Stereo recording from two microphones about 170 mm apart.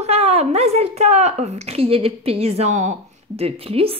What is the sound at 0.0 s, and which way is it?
Speech, 40° right (ahead or behind).